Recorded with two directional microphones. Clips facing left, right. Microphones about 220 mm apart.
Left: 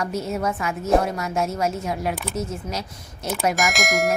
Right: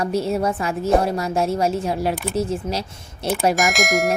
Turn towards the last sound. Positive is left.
turn(degrees=0)  # may be behind; listen again after turning